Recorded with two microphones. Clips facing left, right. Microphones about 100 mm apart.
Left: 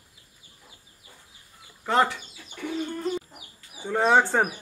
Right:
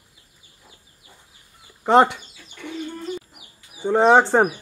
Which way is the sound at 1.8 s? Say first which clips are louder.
Right 8 dB; 20° right (ahead or behind).